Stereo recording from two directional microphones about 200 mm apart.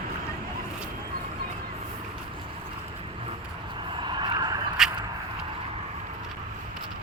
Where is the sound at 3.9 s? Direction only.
25° right (ahead or behind).